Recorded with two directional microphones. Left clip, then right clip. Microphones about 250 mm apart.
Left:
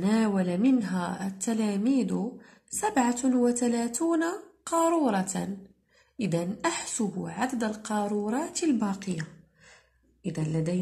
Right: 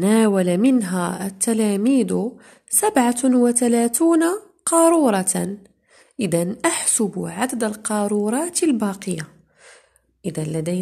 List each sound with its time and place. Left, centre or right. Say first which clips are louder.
0.0 s a woman's voice: right 10 dB; right